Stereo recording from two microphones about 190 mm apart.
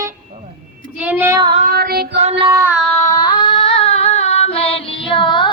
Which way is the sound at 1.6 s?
55° right (ahead or behind).